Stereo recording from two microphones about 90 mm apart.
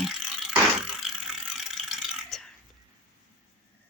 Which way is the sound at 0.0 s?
5° right (ahead or behind).